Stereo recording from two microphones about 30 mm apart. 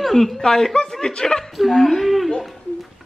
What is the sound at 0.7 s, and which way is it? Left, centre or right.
Speech, left.